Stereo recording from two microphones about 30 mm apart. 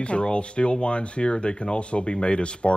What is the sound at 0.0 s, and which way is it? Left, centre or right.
Speech, left.